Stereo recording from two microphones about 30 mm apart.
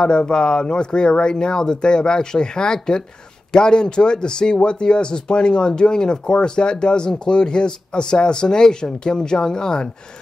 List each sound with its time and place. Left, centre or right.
0.0 s speech: left